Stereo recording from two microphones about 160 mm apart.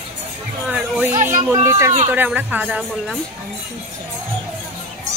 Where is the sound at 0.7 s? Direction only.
10° right (ahead or behind).